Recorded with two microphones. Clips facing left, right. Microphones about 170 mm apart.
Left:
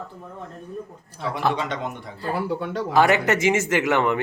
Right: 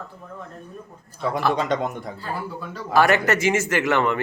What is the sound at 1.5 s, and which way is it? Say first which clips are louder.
Speech: right 4 dB; 45° right (ahead or behind).